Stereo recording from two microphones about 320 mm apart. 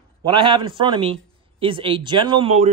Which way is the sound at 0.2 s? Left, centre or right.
Centre.